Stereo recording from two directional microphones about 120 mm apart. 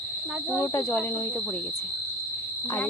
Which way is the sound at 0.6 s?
20° left (ahead or behind).